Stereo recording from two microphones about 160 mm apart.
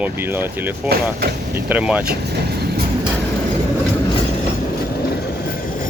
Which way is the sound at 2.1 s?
85° right.